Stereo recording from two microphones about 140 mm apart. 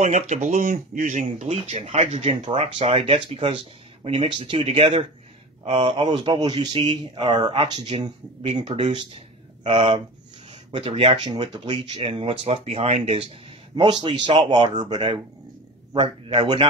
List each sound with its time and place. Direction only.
0.0 s speech: 60° right (ahead or behind); by 12.1 s 30° right (ahead or behind)
12.1 s speech: 45° right (ahead or behind)